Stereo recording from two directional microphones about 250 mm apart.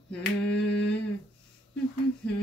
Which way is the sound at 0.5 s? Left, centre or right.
Left.